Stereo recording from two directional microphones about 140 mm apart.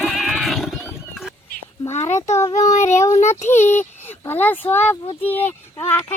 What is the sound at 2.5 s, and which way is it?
Child singing, 60° left (ahead or behind).